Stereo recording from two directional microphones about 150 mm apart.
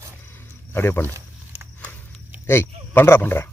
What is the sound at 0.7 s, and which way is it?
Speech, 15° left (ahead or behind).